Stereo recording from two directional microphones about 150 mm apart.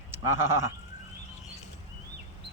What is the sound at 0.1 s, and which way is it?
Sheep, 15° right (ahead or behind).